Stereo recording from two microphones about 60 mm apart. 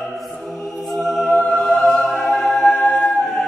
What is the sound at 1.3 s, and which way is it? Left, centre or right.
Music, left.